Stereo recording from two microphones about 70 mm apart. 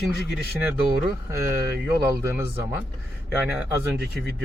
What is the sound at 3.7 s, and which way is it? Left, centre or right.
Speech, right.